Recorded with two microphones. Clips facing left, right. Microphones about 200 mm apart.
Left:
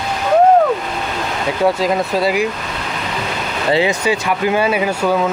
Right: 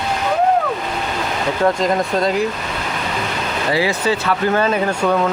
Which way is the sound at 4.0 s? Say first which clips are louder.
Left 1 dB; 15° left (ahead or behind).